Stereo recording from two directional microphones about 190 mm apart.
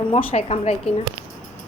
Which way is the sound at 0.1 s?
30° left (ahead or behind).